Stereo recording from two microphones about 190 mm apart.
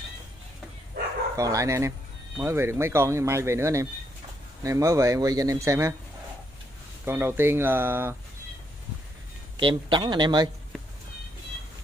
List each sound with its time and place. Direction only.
1.3 s speech: 20° right (ahead or behind)
7.1 s speech: 10° right (ahead or behind)
9.6 s speech: 25° right (ahead or behind)